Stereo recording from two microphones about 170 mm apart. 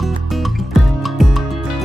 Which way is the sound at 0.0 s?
Centre (ahead or behind).